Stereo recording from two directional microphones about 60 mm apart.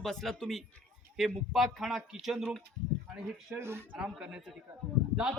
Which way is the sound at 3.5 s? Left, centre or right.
Right.